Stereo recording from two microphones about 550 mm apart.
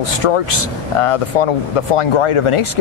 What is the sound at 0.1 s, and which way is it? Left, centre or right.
Speech, left.